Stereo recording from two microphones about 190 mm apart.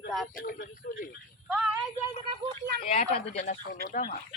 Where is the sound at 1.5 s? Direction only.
5° right (ahead or behind).